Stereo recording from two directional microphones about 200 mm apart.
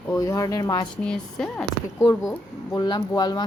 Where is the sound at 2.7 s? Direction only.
20° left (ahead or behind).